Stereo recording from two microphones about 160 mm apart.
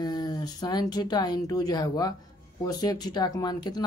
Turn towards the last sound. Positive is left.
turn(degrees=25)  # may be behind; listen again after turning